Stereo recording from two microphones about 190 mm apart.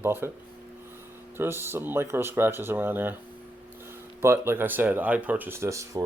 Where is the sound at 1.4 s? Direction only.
10° right (ahead or behind).